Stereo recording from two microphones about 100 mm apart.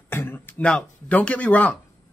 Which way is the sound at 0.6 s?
10° left (ahead or behind).